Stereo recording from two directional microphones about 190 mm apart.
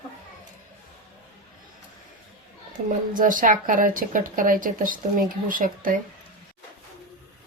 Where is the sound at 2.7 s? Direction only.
45° right (ahead or behind).